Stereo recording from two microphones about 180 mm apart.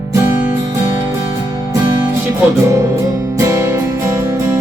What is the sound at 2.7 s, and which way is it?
Music, 15° right (ahead or behind).